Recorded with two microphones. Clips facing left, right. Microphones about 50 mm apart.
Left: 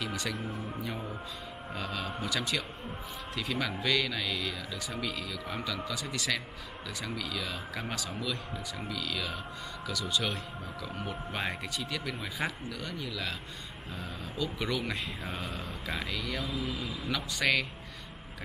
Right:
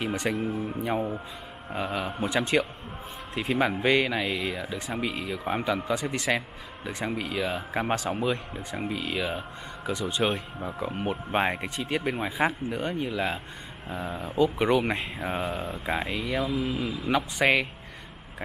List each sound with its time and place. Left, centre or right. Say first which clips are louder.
0.0 s speech: right 7 dB; right
16.5 s speech: right 7 dB; right
17.1 s speech: right 6 dB; right